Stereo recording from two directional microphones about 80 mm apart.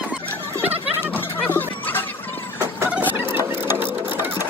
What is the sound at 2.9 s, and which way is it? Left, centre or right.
Cluck, right.